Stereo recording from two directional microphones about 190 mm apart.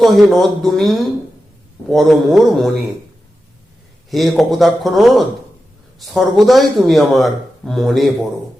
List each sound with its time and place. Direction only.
0.0 s speech: centre (ahead or behind)
4.1 s speech: centre (ahead or behind)